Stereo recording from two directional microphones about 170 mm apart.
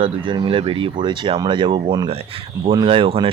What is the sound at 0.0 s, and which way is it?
Speech, 30° right (ahead or behind).